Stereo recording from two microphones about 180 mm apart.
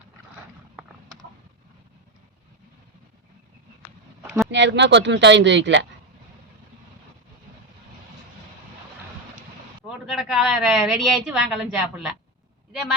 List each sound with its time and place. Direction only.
4.5 s speech: 80° right
9.8 s a sound: centre (ahead or behind)
11.3 s a woman's voice: 5° right (ahead or behind)